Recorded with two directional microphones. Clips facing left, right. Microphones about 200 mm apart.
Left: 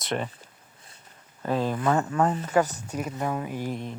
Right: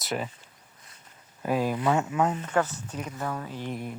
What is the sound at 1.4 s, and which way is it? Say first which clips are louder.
Speech: even; 10° right (ahead or behind).